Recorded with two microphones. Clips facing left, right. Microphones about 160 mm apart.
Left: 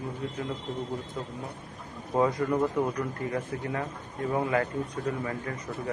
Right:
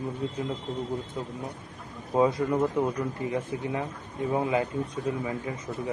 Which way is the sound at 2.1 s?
20° right (ahead or behind).